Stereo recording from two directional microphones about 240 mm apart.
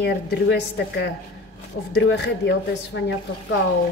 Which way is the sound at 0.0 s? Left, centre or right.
Left.